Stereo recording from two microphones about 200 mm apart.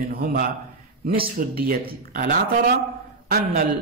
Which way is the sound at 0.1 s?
50° right (ahead or behind).